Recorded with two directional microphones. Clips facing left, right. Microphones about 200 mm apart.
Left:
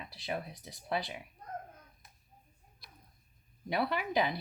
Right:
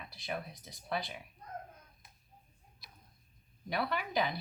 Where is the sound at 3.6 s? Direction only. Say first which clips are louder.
Left 3 dB; 25° left (ahead or behind).